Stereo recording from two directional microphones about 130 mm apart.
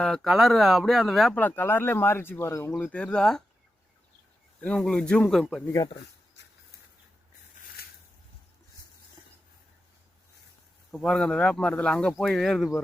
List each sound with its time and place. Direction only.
0.0 s speech: 5° left (ahead or behind)
1.4 s speech: 15° left (ahead or behind)
4.6 s speech: 5° left (ahead or behind)
5.6 s speech: 25° left (ahead or behind)
10.9 s speech: centre (ahead or behind)